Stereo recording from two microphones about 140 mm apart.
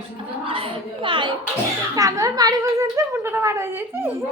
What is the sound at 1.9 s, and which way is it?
Speech, 25° right (ahead or behind).